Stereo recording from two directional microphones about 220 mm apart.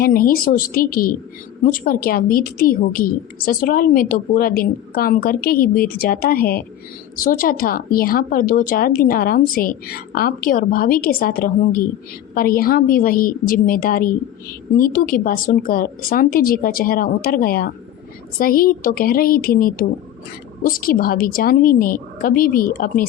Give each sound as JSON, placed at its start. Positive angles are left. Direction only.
{"t": 0.0, "sound": "a woman's voice", "side_deg": 40}